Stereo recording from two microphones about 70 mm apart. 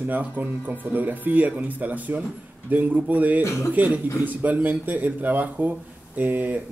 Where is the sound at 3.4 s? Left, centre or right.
Left.